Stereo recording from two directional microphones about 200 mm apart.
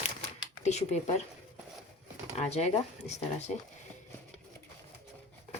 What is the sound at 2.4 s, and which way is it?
Speech, 35° left (ahead or behind).